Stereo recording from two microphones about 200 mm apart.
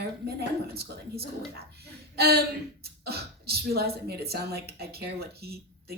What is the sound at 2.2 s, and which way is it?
A woman's voice, 50° right (ahead or behind).